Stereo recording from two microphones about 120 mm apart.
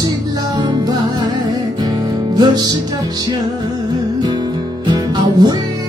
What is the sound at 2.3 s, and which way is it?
Music, 35° right (ahead or behind).